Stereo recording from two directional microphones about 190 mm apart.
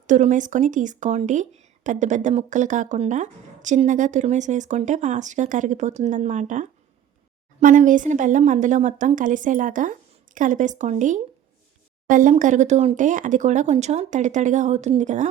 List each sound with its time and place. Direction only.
0.1 s speech: 40° right (ahead or behind)